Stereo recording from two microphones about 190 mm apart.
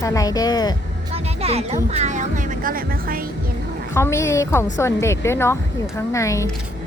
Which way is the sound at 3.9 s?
15° left (ahead or behind).